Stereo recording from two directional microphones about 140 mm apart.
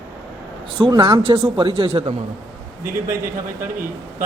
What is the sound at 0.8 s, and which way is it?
A man's voice, 35° right (ahead or behind).